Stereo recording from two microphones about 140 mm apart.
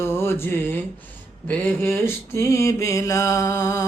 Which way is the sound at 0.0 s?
20° left (ahead or behind).